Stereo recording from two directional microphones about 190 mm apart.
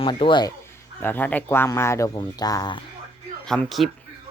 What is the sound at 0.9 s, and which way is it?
Speech, 10° left (ahead or behind).